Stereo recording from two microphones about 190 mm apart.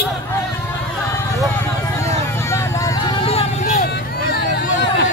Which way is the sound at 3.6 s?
45° left (ahead or behind).